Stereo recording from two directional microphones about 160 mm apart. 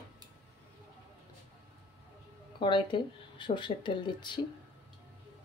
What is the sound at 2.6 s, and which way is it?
Speech, 30° left (ahead or behind).